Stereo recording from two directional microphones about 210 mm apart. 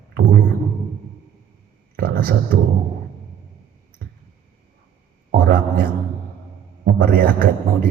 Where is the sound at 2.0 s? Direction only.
45° right (ahead or behind).